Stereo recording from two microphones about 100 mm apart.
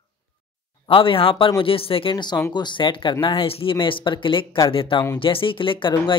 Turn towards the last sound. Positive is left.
turn(degrees=55)  # may be behind; listen again after turning